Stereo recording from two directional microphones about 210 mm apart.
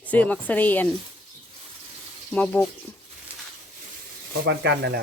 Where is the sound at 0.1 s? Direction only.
10° left (ahead or behind).